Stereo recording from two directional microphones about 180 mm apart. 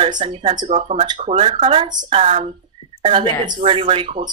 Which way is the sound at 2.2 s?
40° right (ahead or behind).